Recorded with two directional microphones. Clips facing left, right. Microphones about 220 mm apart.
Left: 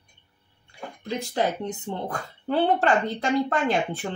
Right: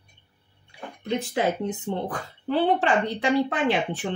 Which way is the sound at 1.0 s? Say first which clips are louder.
Right 1 dB; 35° left (ahead or behind).